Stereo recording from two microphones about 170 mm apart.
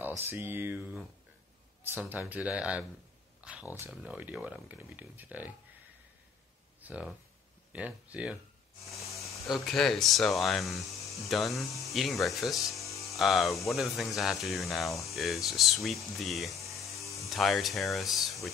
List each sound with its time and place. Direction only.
0.2 s speech: 10° right (ahead or behind)
3.3 s a sound: 5° right (ahead or behind)
3.7 s speech: 10° right (ahead or behind)
6.8 s speech: 10° right (ahead or behind)
9.1 s a sound: centre (ahead or behind)
9.5 s speech: centre (ahead or behind)
12.8 s music: 20° left (ahead or behind)
13.1 s speech: centre (ahead or behind)
16.6 s music: 20° left (ahead or behind)
17.2 s speech: centre (ahead or behind)